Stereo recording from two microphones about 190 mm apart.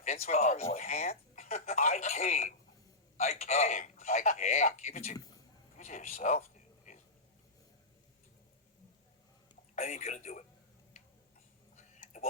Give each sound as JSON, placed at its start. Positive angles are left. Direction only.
{"t": 0.0, "sound": "speech", "side_deg": 35}
{"t": 5.1, "sound": "speech", "side_deg": 20}
{"t": 5.7, "sound": "speech", "side_deg": 40}
{"t": 9.7, "sound": "speech", "side_deg": 35}
{"t": 11.8, "sound": "whispering", "side_deg": 40}